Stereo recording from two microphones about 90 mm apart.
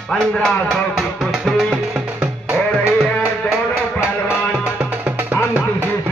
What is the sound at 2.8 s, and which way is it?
Music, 30° left (ahead or behind).